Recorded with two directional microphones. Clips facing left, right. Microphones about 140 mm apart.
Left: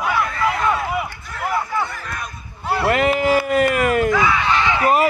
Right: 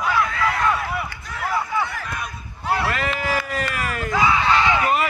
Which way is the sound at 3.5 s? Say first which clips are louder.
Left 10 dB; 55° left (ahead or behind).